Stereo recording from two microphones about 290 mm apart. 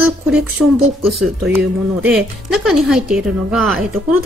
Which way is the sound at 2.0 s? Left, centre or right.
Centre.